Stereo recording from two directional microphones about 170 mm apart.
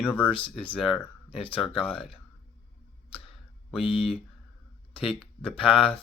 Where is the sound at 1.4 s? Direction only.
30° left (ahead or behind).